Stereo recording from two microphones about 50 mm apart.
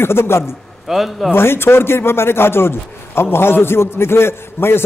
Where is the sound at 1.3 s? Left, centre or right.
Left.